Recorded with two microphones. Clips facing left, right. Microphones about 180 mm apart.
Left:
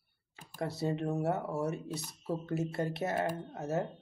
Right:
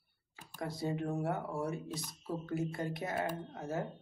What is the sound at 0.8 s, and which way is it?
Speech, 25° left (ahead or behind).